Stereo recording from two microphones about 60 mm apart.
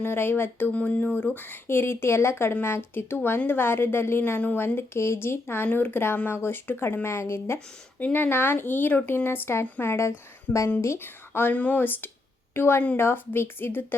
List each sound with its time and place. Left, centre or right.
0.0 s speech: left
0.7 s speech: left
4.4 s speech: left
4.6 s speech: left
7.9 s speech: left
11.0 s speech: left
11.5 s a woman's voice: left